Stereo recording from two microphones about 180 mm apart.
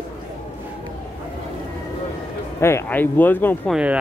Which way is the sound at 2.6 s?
15° left (ahead or behind).